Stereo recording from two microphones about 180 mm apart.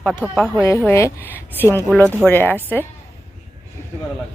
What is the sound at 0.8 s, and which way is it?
Speech, 15° left (ahead or behind).